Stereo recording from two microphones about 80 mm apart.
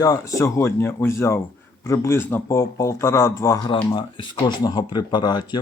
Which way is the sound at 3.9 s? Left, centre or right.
Left.